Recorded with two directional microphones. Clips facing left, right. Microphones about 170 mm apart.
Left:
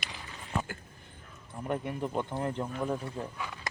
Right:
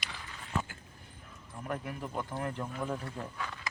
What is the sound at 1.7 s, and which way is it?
Speech, 25° left (ahead or behind).